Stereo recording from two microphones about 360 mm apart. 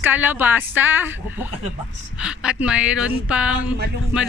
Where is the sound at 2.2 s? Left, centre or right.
Centre.